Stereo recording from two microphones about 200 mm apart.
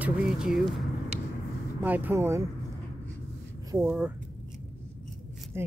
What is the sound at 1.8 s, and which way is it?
Speech, 10° right (ahead or behind).